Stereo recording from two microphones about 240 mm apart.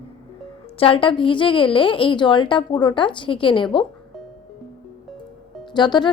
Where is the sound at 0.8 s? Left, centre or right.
Left.